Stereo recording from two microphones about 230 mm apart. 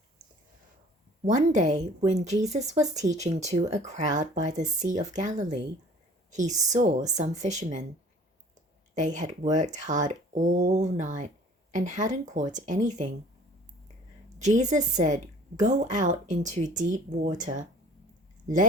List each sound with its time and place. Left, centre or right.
1.2 s a woman's voice: right
9.0 s speech: right
14.3 s speech: right